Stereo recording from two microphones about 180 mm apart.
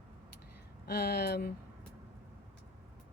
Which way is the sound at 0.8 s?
60° left (ahead or behind).